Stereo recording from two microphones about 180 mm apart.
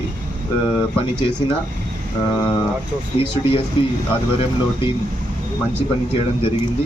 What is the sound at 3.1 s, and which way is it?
Speech, 30° left (ahead or behind).